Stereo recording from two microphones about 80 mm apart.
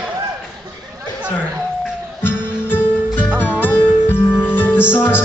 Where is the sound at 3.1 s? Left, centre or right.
Centre.